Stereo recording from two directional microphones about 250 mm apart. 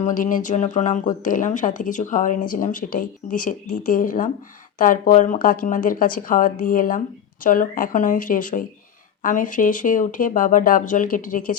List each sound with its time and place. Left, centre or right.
0.0 s speech: left